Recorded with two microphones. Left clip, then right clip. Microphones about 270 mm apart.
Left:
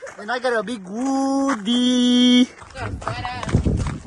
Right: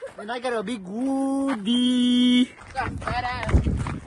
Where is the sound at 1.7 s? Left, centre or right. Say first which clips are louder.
Left 2 dB; centre.